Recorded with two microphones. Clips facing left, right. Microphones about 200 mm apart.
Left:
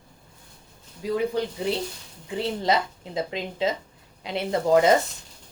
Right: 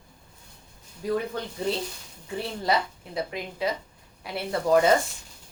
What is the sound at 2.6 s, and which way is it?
Speech, 20° left (ahead or behind).